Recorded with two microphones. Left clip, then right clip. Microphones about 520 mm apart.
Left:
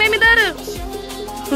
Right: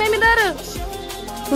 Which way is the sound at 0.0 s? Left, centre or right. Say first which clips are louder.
Left 3 dB; left.